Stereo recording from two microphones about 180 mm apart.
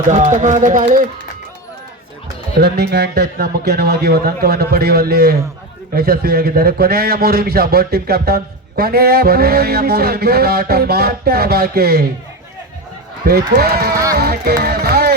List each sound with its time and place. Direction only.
0.1 s speech: 40° right (ahead or behind)
2.6 s a man's voice: 65° right (ahead or behind)
13.2 s a man's voice: 60° right (ahead or behind)
13.9 s music: 20° right (ahead or behind)
14.2 s music: 60° right (ahead or behind)